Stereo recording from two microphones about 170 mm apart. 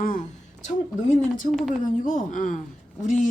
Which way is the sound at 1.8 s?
50° left (ahead or behind).